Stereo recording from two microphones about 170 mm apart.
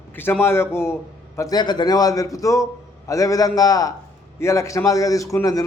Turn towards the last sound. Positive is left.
turn(degrees=20)  # may be behind; listen again after turning